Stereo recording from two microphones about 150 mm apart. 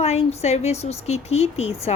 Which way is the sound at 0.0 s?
45° left (ahead or behind).